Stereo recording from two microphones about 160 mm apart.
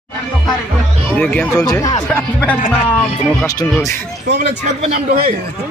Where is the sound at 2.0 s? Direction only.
10° left (ahead or behind).